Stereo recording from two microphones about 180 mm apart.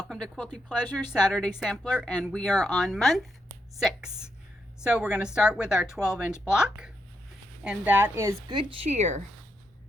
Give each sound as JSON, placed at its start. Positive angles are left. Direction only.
{"t": 0.1, "sound": "a woman's voice", "side_deg": 5}